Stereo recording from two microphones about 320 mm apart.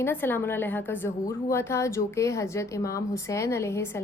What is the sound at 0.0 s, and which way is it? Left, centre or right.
Speech, centre.